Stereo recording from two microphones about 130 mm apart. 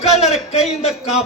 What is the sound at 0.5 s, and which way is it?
Speech, 55° left (ahead or behind).